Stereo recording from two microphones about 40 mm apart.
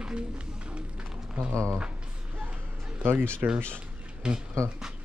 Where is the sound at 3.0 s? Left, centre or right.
Right.